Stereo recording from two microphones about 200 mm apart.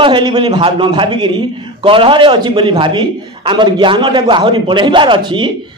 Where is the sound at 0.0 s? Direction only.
25° right (ahead or behind).